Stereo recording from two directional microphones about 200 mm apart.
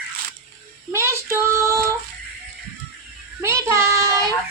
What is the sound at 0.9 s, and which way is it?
Speech, 15° right (ahead or behind).